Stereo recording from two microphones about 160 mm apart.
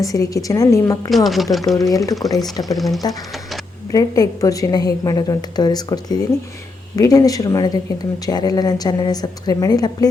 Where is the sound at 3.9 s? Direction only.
20° left (ahead or behind).